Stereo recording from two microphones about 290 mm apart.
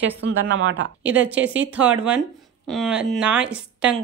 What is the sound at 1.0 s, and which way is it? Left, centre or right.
A woman's voice, centre.